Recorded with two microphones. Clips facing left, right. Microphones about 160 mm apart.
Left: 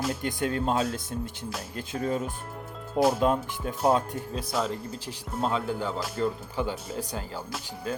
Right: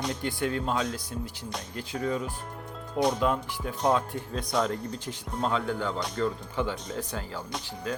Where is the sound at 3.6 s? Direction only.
35° left (ahead or behind).